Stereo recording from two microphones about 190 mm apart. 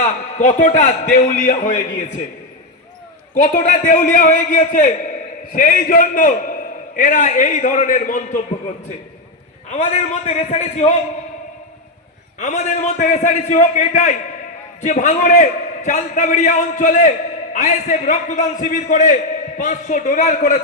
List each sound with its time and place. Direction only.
0.0 s a man's voice: 40° left (ahead or behind)
3.4 s a man's voice: 45° left (ahead or behind)
9.6 s a man's voice: 35° left (ahead or behind)
12.4 s a man's voice: 40° left (ahead or behind)